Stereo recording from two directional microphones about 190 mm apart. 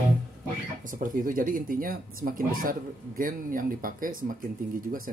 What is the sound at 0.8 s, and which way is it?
Speech, 45° right (ahead or behind).